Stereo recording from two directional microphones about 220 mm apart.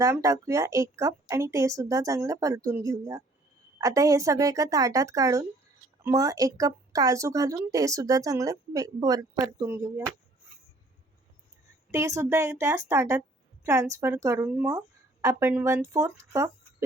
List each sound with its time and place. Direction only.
0.0 s speech: 15° right (ahead or behind)
11.9 s speech: 15° right (ahead or behind)